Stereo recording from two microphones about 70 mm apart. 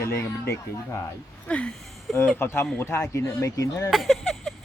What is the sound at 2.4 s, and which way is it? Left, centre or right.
Speech, left.